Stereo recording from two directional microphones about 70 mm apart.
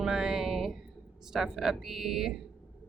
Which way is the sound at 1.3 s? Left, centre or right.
Centre.